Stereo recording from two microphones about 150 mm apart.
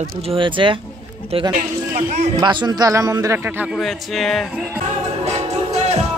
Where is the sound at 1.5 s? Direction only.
55° right (ahead or behind).